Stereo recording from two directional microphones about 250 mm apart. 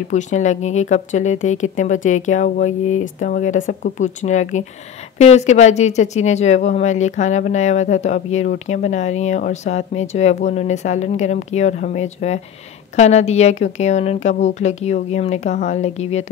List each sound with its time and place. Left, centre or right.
0.1 s speech: left